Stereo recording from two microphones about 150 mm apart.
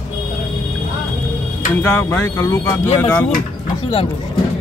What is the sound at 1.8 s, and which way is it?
A man's voice, 15° left (ahead or behind).